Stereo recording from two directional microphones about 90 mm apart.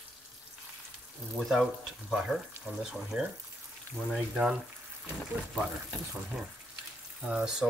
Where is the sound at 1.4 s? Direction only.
Centre (ahead or behind).